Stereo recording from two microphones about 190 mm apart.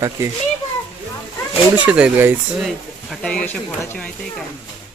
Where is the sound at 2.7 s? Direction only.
5° left (ahead or behind).